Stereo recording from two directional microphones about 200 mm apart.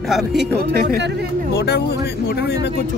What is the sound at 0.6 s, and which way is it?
Speech, 50° right (ahead or behind).